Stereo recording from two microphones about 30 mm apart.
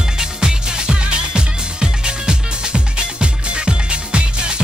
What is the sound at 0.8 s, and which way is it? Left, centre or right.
Music, right.